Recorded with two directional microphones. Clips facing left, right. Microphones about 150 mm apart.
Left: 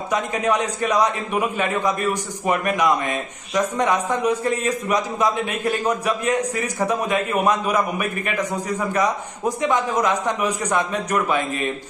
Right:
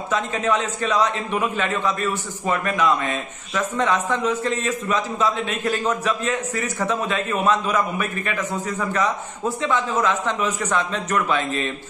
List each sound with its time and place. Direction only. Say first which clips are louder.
0.1 s a man's voice: left 1 dB; 15° left (ahead or behind)